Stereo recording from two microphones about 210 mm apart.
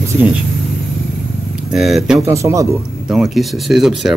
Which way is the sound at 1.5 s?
Centre (ahead or behind).